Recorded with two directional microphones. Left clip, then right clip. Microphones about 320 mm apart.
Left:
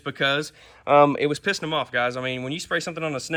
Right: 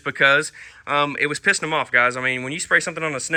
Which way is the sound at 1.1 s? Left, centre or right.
Centre.